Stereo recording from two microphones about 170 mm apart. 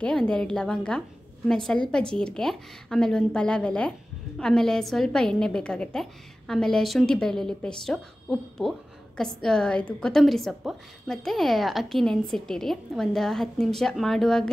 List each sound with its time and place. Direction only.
0.0 s a woman's voice: 5° left (ahead or behind)